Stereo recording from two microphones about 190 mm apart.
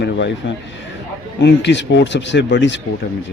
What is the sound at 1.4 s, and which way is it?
A man's voice, 65° left (ahead or behind).